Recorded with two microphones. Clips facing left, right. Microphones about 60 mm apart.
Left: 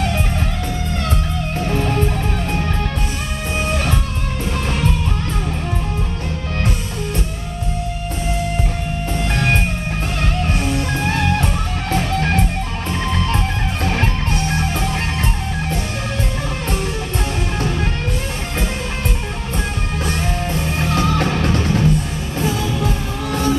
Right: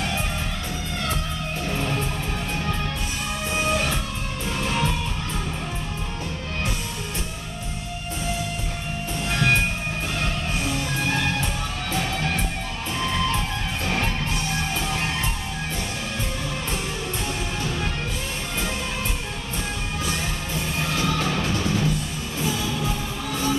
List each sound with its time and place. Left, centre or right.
9.3 s music: left
20.9 s music: left